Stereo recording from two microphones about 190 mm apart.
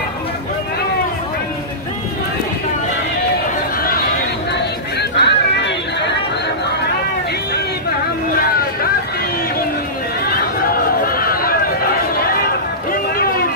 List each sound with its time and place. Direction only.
5.1 s chatter: 65° left (ahead or behind)
10.2 s run: 50° left (ahead or behind)
12.3 s a sound: 50° left (ahead or behind)